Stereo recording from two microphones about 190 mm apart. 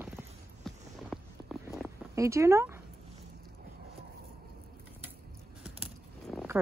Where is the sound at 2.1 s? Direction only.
15° right (ahead or behind).